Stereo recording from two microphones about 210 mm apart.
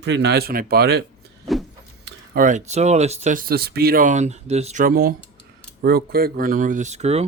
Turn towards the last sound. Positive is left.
turn(degrees=-30)  # may be behind; listen again after turning